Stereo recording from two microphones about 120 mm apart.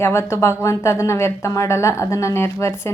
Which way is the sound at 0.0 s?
20° left (ahead or behind).